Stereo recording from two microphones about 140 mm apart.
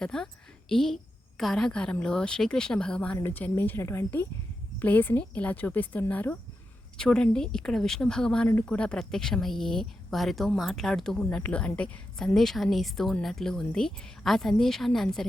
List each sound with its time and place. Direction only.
0.0 s a woman's voice: 5° left (ahead or behind)